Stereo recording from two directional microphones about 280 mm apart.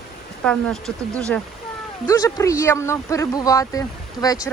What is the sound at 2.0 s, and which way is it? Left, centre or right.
Speech, centre.